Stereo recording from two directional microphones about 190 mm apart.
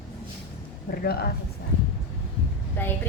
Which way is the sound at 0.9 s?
55° left (ahead or behind).